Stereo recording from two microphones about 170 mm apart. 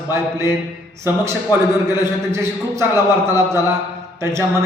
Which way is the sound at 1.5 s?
25° left (ahead or behind).